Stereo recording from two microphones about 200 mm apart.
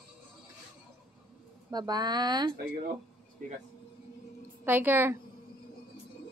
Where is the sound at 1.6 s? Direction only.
20° right (ahead or behind).